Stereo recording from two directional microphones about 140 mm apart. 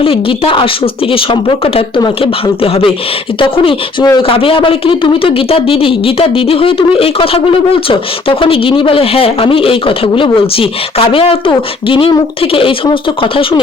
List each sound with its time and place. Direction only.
0.0 s speech: 40° left (ahead or behind)
3.4 s speech: 40° left (ahead or behind)